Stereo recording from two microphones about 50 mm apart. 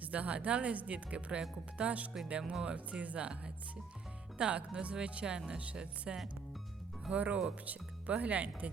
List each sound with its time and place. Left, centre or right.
0.0 s speech: right
2.4 s speech: centre
2.7 s speech: right
7.6 s music: right
8.2 s speech: right